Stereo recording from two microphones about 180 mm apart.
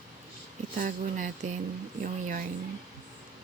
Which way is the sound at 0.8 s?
45° right (ahead or behind).